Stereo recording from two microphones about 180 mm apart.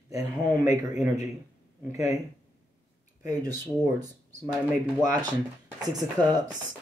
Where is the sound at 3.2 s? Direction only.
20° right (ahead or behind).